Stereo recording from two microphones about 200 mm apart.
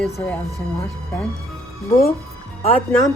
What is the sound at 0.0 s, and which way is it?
Speech, 5° left (ahead or behind).